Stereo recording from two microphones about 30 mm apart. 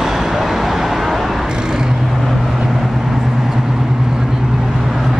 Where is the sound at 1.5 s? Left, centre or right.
Right.